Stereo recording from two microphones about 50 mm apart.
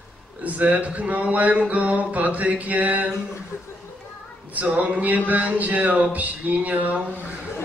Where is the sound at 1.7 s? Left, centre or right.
Right.